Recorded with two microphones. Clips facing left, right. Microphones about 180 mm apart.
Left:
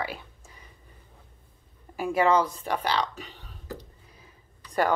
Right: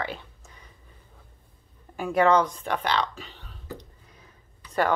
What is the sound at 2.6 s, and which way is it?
Speech, 35° left (ahead or behind).